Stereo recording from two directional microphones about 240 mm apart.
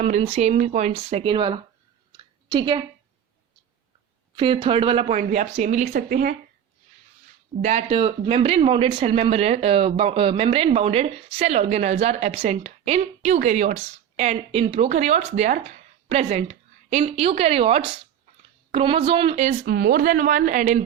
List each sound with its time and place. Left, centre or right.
0.0 s speech: right
2.1 s a sound: centre
4.4 s speech: right
7.6 s speech: right
19.6 s a woman's voice: right